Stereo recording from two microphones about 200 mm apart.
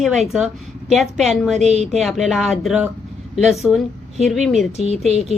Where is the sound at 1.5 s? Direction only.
35° right (ahead or behind).